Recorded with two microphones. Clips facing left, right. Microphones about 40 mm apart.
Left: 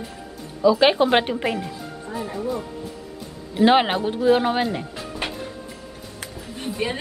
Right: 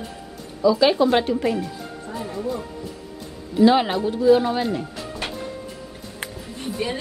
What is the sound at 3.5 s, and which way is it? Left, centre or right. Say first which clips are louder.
Speech: even; left.